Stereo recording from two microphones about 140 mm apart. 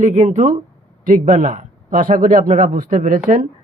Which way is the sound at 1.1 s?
80° right.